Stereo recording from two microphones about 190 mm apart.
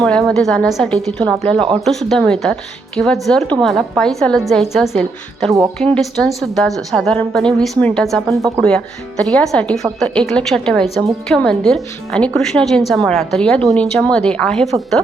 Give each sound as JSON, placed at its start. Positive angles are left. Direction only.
{"t": 0.0, "sound": "speech", "side_deg": 5}
{"t": 8.4, "sound": "speech", "side_deg": -15}
{"t": 8.6, "sound": "speech", "side_deg": 5}